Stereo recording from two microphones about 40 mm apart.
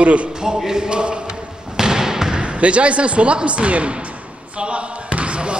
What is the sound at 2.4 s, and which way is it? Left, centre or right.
Speech, right.